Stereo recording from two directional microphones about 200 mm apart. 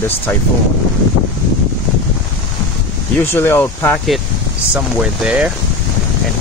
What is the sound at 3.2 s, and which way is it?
Speech, 10° left (ahead or behind).